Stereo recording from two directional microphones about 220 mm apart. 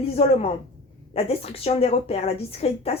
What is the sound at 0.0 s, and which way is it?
A woman's voice, 25° left (ahead or behind).